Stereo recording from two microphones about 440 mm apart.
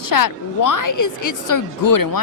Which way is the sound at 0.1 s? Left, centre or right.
Left.